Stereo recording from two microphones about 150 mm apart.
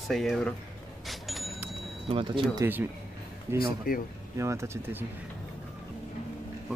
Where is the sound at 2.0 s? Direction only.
35° right (ahead or behind).